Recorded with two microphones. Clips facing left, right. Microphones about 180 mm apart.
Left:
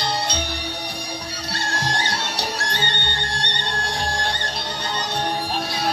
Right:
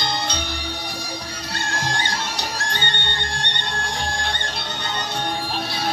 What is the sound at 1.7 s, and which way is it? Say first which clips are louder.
Music: left 1 dB; 35° left (ahead or behind).